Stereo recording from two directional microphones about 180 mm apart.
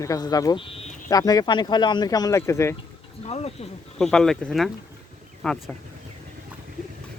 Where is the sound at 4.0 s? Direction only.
5° left (ahead or behind).